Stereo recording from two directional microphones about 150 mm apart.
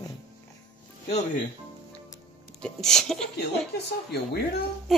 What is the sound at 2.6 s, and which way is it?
Speech, 5° left (ahead or behind).